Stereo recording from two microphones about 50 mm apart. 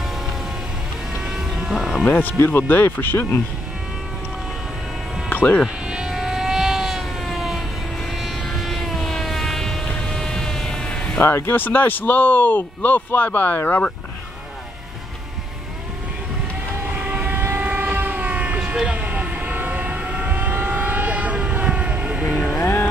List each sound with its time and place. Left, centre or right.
1.3 s vehicle: centre
2.0 s speech: left
5.3 s sheep: left
5.9 s vehicle: centre
11.1 s speech: left
17.0 s train: right
17.4 s train: right
18.6 s vehicle: centre